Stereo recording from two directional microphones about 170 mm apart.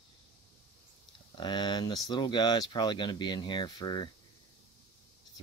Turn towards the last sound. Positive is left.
turn(degrees=25)  # may be behind; listen again after turning